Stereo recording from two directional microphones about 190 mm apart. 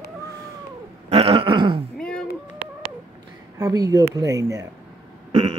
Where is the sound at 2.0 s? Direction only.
5° left (ahead or behind).